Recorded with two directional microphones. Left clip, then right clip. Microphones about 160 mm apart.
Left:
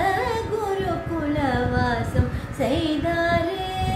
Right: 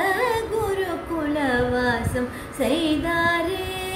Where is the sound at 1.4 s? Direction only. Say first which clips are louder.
Right 2 dB; 5° right (ahead or behind).